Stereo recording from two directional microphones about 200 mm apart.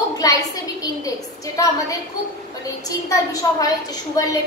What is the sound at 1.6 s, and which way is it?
Speech, 15° left (ahead or behind).